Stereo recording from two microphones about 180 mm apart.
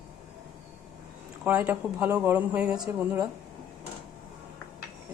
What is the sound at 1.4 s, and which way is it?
Speech, 10° right (ahead or behind).